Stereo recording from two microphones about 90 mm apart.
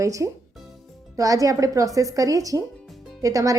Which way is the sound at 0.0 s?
35° right (ahead or behind).